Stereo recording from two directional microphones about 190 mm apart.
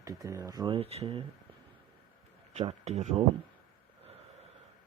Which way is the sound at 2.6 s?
40° right (ahead or behind).